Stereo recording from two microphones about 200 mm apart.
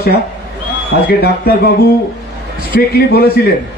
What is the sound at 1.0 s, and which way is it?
A man's voice, 50° left (ahead or behind).